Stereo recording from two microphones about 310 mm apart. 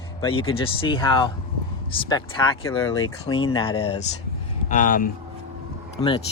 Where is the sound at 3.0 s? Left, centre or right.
Left.